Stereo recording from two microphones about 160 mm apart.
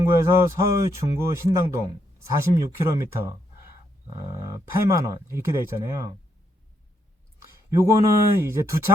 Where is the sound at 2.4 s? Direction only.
15° right (ahead or behind).